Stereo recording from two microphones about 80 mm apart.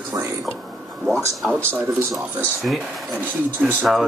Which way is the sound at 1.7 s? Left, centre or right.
Right.